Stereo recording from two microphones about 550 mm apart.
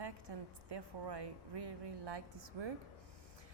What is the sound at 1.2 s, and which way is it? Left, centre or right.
Speech, right.